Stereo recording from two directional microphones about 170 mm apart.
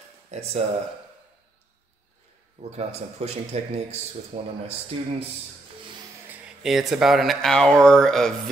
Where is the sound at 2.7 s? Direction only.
40° right (ahead or behind).